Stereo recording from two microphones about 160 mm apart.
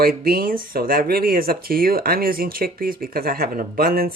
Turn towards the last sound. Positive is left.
turn(degrees=-70)  # may be behind; listen again after turning